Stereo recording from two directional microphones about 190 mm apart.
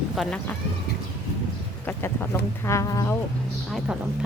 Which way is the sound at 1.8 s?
10° left (ahead or behind).